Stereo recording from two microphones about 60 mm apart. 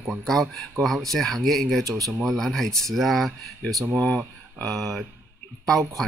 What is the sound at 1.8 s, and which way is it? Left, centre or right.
Speech, right.